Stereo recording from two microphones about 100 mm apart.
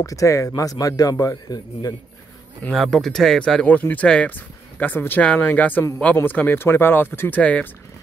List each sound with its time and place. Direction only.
0.0 s a man's voice: 35° left (ahead or behind)
2.7 s speech: centre (ahead or behind)